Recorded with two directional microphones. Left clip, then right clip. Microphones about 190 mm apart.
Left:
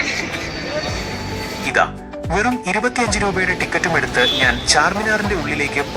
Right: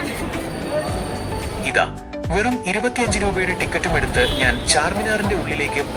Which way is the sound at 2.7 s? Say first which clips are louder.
Left 2 dB; 30° right (ahead or behind).